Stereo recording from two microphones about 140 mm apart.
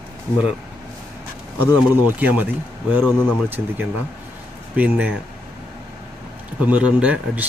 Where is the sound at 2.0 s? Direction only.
10° right (ahead or behind).